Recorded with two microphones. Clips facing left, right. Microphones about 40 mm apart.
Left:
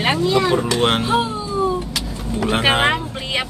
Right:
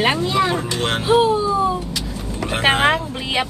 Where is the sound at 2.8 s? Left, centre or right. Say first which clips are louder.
Right 1 dB; centre.